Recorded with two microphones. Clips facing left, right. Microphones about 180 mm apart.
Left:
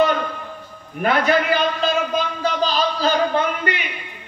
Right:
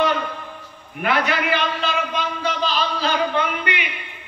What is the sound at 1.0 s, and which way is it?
A man's voice, 35° left (ahead or behind).